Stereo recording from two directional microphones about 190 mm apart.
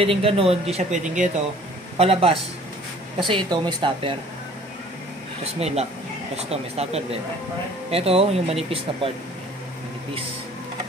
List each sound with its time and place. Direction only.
0.0 s speech: 30° right (ahead or behind)
5.4 s speech: 35° right (ahead or behind)